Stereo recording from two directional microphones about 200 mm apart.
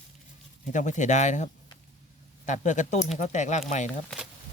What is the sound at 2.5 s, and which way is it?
Speech, 40° left (ahead or behind).